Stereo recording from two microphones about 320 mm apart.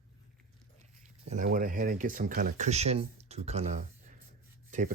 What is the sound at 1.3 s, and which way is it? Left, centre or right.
Speech, right.